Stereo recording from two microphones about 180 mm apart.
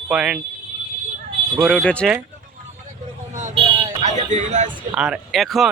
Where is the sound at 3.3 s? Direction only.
40° right (ahead or behind).